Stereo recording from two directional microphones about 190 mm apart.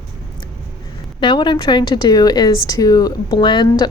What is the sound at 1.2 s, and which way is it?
A woman's voice, 25° left (ahead or behind).